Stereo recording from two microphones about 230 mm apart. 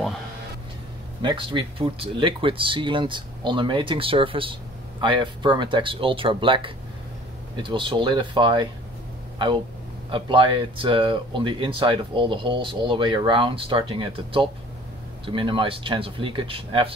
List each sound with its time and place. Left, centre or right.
1.2 s speech: right
10.1 s speech: right